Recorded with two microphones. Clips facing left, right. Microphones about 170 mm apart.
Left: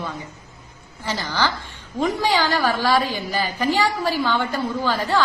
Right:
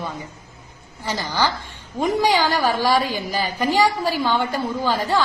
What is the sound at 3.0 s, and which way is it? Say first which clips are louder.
Speech: even; 40° right (ahead or behind).